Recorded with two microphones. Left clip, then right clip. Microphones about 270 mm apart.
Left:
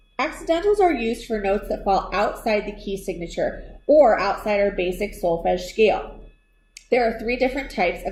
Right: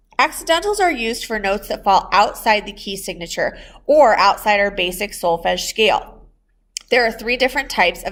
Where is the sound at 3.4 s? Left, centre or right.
Right.